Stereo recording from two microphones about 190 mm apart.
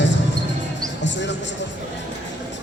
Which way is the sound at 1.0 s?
70° left (ahead or behind).